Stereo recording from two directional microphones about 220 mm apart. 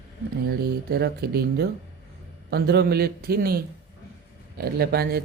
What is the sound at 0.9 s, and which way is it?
A man's voice, 45° right (ahead or behind).